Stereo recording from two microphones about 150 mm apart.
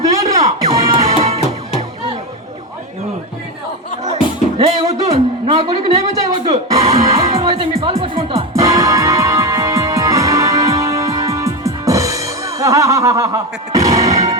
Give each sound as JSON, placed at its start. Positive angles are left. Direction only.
{"t": 0.1, "sound": "music", "side_deg": -20}
{"t": 1.1, "sound": "music", "side_deg": -45}
{"t": 4.5, "sound": "music", "side_deg": -40}
{"t": 5.5, "sound": "a sound", "side_deg": -40}
{"t": 6.5, "sound": "music", "side_deg": -45}
{"t": 8.5, "sound": "music", "side_deg": -20}